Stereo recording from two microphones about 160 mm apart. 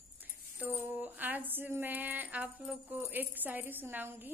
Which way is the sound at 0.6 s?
10° right (ahead or behind).